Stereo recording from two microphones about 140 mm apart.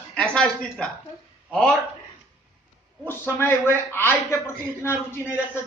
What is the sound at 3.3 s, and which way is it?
A man's voice, 15° left (ahead or behind).